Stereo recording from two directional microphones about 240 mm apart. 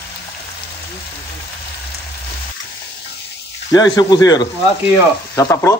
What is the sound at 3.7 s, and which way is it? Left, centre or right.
Frying, centre.